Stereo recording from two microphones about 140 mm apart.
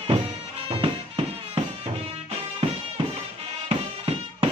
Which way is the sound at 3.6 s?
45° right (ahead or behind).